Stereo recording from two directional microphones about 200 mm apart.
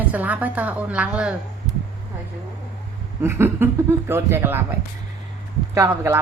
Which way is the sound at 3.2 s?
10° right (ahead or behind).